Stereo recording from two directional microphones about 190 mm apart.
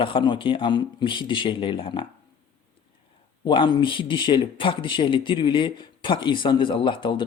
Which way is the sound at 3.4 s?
25° left (ahead or behind).